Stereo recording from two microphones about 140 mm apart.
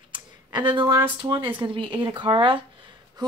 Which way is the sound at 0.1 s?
35° right (ahead or behind).